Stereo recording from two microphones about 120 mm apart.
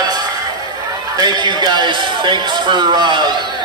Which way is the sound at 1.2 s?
35° right (ahead or behind).